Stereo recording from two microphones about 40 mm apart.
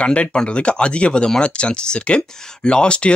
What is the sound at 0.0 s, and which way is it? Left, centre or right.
Speech, left.